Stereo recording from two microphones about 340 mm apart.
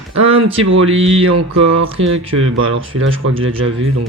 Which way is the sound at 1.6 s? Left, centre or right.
Right.